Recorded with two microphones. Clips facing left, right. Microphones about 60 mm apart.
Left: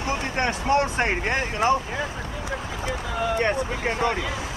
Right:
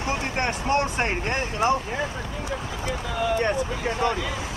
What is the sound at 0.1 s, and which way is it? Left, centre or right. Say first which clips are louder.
Vehicle: left 1 dB; left.